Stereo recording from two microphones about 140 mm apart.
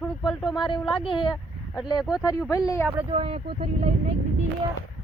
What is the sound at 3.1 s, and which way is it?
Speech, 45° right (ahead or behind).